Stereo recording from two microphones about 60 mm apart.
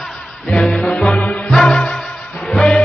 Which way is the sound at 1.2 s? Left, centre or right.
Centre.